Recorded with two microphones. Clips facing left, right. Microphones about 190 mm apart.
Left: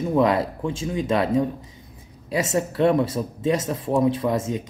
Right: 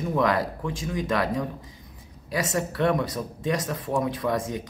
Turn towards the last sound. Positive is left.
turn(degrees=25)  # may be behind; listen again after turning